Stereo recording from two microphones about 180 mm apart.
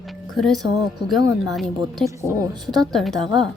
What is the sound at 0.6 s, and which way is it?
Speech, 25° right (ahead or behind).